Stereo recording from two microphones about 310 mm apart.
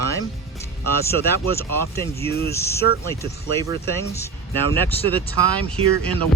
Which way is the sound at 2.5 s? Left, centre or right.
Centre.